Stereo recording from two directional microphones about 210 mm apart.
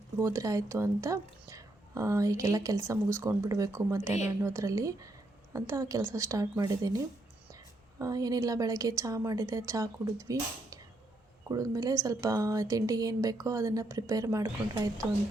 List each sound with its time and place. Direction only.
0.2 s speech: 15° right (ahead or behind)